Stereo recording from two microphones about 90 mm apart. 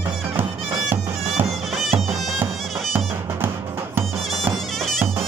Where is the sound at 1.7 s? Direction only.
Centre (ahead or behind).